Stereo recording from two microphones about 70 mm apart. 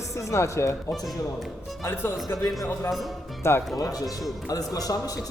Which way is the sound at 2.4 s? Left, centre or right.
Left.